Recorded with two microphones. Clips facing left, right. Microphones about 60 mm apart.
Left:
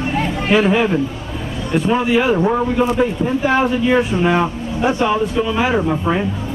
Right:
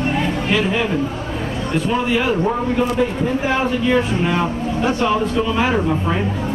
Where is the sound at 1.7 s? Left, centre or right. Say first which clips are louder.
Left 4 dB; centre.